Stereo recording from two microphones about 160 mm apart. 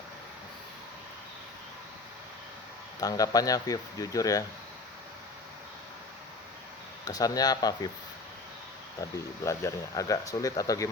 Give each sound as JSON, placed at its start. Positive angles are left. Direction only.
{"t": 3.0, "sound": "speech", "side_deg": 25}
{"t": 7.0, "sound": "speech", "side_deg": 25}
{"t": 9.0, "sound": "speech", "side_deg": 20}